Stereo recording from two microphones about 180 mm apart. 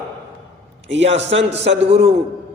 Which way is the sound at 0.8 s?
90° right.